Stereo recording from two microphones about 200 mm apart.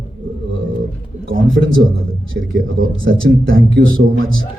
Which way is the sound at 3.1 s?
60° right (ahead or behind).